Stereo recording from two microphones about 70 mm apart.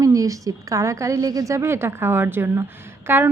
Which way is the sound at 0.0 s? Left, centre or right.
Right.